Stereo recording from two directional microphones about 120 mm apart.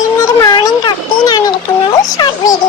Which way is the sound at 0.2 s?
25° left (ahead or behind).